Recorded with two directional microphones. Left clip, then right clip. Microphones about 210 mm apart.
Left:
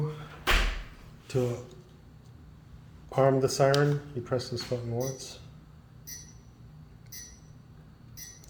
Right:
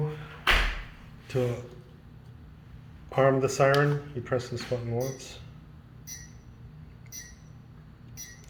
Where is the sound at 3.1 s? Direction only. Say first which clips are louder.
Right 1 dB; 20° left (ahead or behind).